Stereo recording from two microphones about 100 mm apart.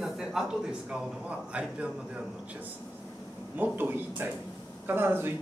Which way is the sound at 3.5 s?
20° right (ahead or behind).